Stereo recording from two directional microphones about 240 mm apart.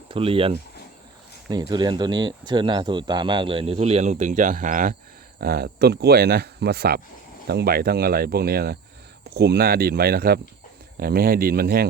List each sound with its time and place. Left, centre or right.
0.1 s speech: right